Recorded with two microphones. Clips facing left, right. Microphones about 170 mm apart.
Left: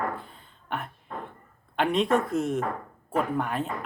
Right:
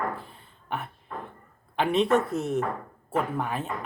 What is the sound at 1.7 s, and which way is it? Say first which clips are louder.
Speech: right 1 dB; centre (ahead or behind).